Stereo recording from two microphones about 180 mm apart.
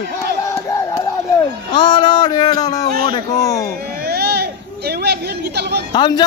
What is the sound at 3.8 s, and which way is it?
Chatter, 60° right (ahead or behind).